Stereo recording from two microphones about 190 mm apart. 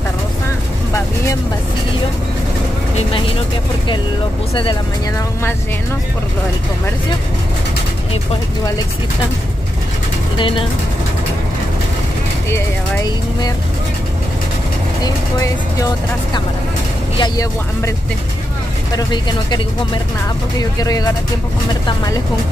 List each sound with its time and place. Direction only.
10.3 s speech: 25° left (ahead or behind)
12.4 s speech: 15° left (ahead or behind)
15.0 s speech: 20° left (ahead or behind)
17.2 s speech: 20° left (ahead or behind)
18.9 s speech: 20° left (ahead or behind)